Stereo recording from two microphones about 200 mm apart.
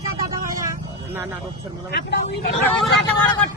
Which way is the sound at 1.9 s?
60° left (ahead or behind).